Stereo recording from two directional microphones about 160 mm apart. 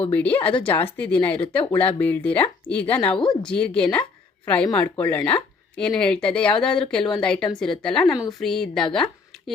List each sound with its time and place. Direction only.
0.1 s speech: 10° left (ahead or behind)
3.1 s a woman's voice: 30° left (ahead or behind)
3.4 s a woman's voice: 5° left (ahead or behind)